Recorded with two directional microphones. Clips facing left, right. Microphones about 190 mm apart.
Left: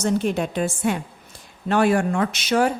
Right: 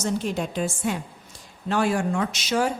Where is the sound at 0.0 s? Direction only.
60° left (ahead or behind).